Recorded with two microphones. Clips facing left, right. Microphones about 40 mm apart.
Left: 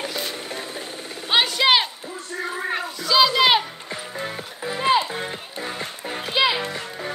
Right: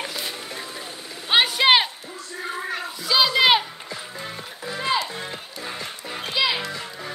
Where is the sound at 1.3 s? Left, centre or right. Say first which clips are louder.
Right 1 dB; centre.